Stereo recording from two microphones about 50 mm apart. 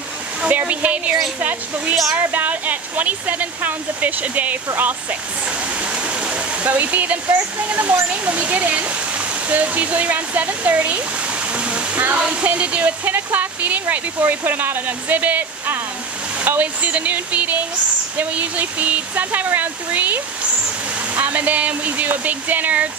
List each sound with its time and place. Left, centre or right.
0.5 s speech: right
5.8 s speech: right
11.5 s waterfall: right
12.2 s speech: right